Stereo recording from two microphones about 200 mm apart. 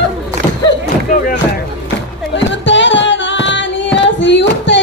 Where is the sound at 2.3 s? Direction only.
65° left (ahead or behind).